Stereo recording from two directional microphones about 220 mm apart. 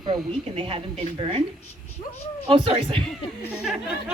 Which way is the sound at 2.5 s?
25° right (ahead or behind).